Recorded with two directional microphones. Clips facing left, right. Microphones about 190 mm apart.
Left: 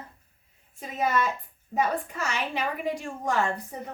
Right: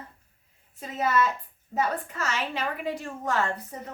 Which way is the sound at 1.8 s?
15° left (ahead or behind).